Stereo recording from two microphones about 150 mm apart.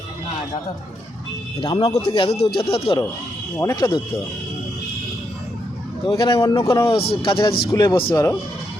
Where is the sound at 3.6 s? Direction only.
20° left (ahead or behind).